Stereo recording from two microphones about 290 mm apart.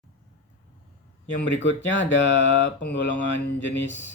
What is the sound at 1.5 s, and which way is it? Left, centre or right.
Speech, left.